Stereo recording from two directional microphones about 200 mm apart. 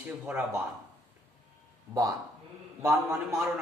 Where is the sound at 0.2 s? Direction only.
Centre (ahead or behind).